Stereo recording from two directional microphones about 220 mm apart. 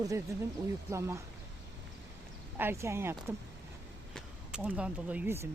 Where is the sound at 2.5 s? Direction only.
10° right (ahead or behind).